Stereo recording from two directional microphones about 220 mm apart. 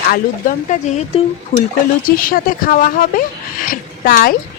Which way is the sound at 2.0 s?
40° left (ahead or behind).